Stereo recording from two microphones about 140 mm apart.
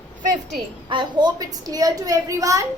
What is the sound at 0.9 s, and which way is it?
A woman's voice, 30° right (ahead or behind).